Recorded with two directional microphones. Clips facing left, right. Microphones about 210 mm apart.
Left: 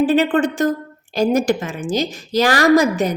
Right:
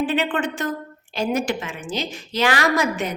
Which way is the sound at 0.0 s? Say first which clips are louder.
Left 7 dB; 40° left (ahead or behind).